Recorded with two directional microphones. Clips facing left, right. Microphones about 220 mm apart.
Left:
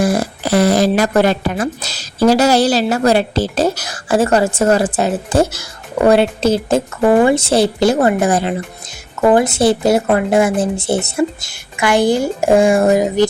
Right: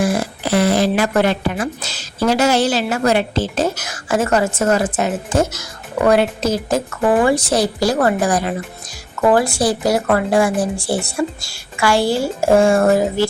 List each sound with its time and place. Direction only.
0.0 s speech: 40° left (ahead or behind); by 13.2 s 15° left (ahead or behind)